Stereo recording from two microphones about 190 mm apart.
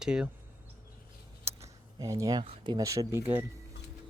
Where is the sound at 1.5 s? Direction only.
15° right (ahead or behind).